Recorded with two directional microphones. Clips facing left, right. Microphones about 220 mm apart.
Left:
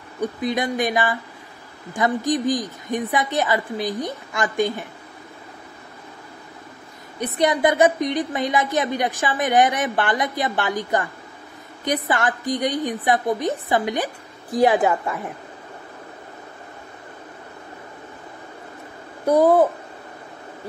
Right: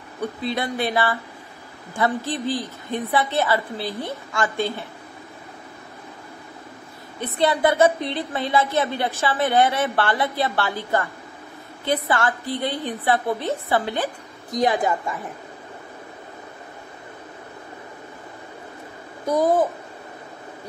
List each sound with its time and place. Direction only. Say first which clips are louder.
0.2 s a woman's voice: left 3 dB; 15° left (ahead or behind)
7.3 s a woman's voice: even; 15° left (ahead or behind)
19.2 s a child's voice: left 4 dB; 35° left (ahead or behind)